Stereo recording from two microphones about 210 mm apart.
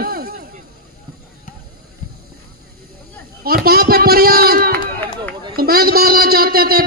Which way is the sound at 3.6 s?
45° right (ahead or behind).